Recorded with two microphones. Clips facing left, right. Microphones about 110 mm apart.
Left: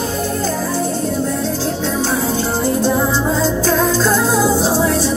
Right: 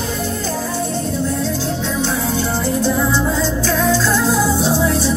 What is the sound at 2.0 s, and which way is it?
Music, 35° left (ahead or behind).